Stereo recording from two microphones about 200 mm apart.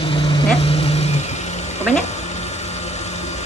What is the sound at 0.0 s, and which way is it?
Vehicle, 25° left (ahead or behind).